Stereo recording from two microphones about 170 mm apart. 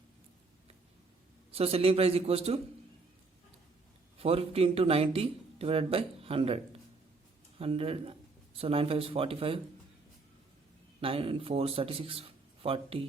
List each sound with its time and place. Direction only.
1.5 s speech: 35° right (ahead or behind)
4.2 s speech: 35° right (ahead or behind)
7.6 s speech: 35° right (ahead or behind)
11.0 s speech: 35° right (ahead or behind)